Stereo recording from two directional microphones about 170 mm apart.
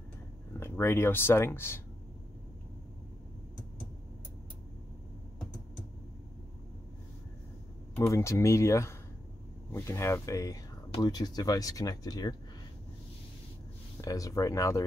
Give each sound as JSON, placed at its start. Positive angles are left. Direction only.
{"t": 0.5, "sound": "speech", "side_deg": 15}
{"t": 7.9, "sound": "speech", "side_deg": 15}
{"t": 14.0, "sound": "speech", "side_deg": 20}